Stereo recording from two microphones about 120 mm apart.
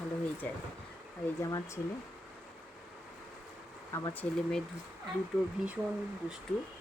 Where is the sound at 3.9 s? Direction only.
25° left (ahead or behind).